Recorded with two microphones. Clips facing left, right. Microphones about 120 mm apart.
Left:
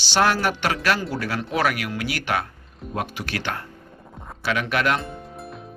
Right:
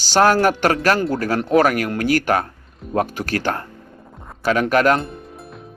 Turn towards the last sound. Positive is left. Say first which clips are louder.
# left 1 dB
turn(degrees=0)  # may be behind; listen again after turning